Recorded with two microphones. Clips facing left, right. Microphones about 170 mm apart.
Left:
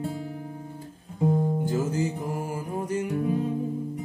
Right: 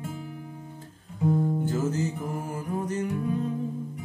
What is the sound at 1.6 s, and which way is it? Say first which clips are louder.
Music: left 1 dB; 15° left (ahead or behind).